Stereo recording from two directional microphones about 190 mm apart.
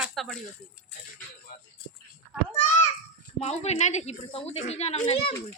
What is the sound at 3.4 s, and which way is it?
A woman's voice, 35° left (ahead or behind).